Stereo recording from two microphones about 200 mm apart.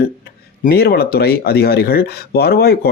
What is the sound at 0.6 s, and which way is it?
Speech, 50° left (ahead or behind).